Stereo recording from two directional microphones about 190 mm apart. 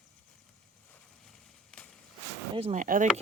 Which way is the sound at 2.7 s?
45° right (ahead or behind).